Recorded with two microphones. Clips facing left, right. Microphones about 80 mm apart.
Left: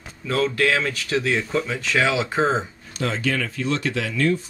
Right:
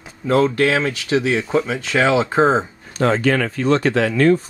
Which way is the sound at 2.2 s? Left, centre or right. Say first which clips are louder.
Right 6 dB; right.